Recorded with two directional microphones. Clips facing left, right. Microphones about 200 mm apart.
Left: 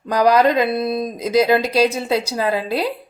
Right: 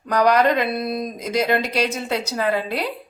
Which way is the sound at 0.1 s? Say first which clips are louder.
Left 2 dB; 35° left (ahead or behind).